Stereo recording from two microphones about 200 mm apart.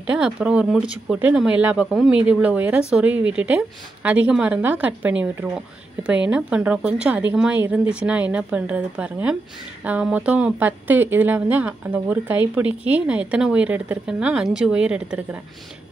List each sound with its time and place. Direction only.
0.0 s speech: 5° right (ahead or behind)